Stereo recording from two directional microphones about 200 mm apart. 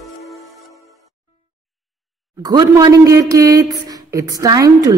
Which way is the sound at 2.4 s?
20° right (ahead or behind).